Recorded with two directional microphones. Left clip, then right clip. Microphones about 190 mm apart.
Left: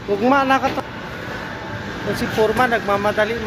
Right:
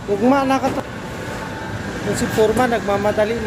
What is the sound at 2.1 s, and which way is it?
Speech, centre (ahead or behind).